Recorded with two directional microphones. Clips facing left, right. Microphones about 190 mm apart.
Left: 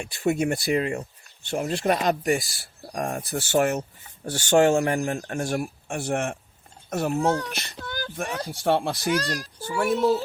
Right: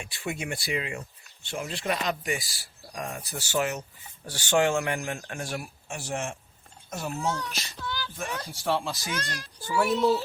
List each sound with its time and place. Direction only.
0.0 s speech: 45° left (ahead or behind)
9.1 s speech: 35° left (ahead or behind)
9.7 s speech: 50° left (ahead or behind)